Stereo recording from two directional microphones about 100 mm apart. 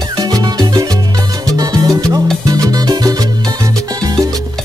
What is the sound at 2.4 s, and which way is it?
Music, 40° right (ahead or behind).